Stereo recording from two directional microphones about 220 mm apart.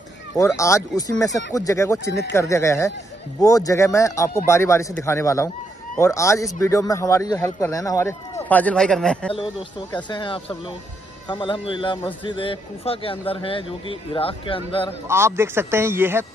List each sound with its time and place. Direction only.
0.6 s speech: 15° left (ahead or behind)
9.3 s a man's voice: 20° left (ahead or behind)
15.0 s a man's voice: 10° right (ahead or behind)